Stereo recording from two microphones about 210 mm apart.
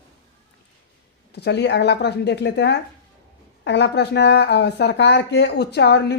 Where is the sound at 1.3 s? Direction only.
55° left (ahead or behind).